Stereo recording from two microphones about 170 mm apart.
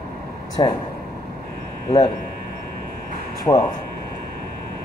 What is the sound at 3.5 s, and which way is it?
Speech, 20° left (ahead or behind).